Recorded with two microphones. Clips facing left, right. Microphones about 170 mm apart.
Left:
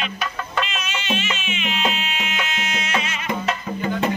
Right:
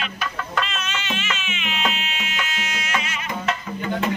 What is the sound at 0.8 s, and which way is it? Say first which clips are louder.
Music: left 3 dB; 15° left (ahead or behind).